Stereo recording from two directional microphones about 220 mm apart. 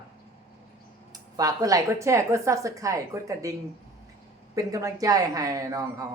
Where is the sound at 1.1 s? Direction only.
15° right (ahead or behind).